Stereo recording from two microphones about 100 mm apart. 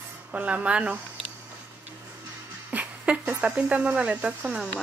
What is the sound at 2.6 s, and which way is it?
Speech, 10° right (ahead or behind).